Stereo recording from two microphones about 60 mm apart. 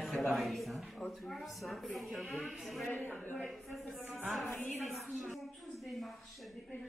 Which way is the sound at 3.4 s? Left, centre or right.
Centre.